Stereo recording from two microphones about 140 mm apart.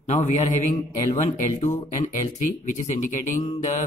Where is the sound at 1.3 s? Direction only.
55° left (ahead or behind).